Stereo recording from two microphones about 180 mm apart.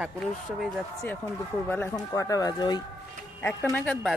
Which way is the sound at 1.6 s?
10° left (ahead or behind).